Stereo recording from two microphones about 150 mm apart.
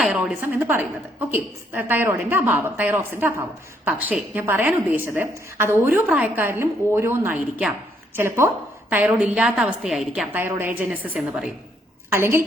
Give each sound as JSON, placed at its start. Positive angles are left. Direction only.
{"t": 0.0, "sound": "a woman's voice", "side_deg": -5}
{"t": 10.3, "sound": "a woman's voice", "side_deg": -15}
{"t": 12.1, "sound": "a woman's voice", "side_deg": -15}